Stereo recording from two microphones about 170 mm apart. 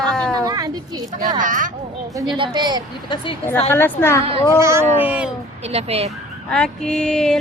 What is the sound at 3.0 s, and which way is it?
Speech, 25° left (ahead or behind).